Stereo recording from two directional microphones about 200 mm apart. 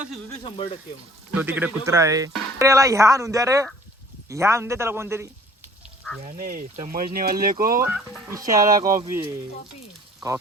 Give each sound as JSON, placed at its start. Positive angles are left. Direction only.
{"t": 0.4, "sound": "speech", "side_deg": 25}
{"t": 1.3, "sound": "a man's voice", "side_deg": -10}
{"t": 6.2, "sound": "speech", "side_deg": -40}
{"t": 7.8, "sound": "speech", "side_deg": -5}
{"t": 8.8, "sound": "speech", "side_deg": -40}